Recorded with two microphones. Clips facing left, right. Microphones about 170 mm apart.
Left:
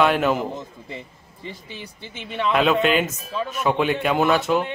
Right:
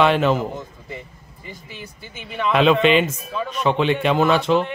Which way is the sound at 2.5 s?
Centre (ahead or behind).